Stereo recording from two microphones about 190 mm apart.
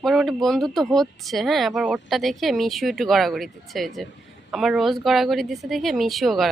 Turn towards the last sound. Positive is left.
turn(degrees=0)  # may be behind; listen again after turning